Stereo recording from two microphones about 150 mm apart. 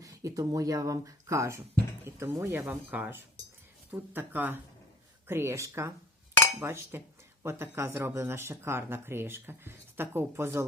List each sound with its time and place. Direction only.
0.0 s speech: 20° right (ahead or behind)